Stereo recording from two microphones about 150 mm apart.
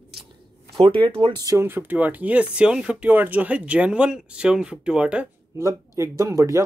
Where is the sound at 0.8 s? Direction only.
35° right (ahead or behind); by 5.6 s 10° right (ahead or behind).